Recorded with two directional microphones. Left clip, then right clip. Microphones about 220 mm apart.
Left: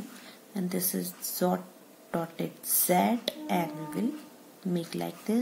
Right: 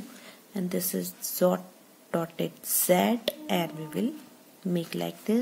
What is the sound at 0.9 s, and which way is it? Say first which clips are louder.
Speech: right 2 dB; 30° right (ahead or behind).